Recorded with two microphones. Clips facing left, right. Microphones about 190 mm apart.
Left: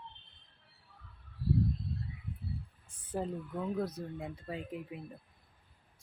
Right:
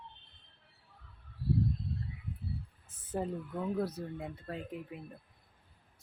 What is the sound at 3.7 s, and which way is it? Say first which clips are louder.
Speech: right 1 dB; 10° right (ahead or behind).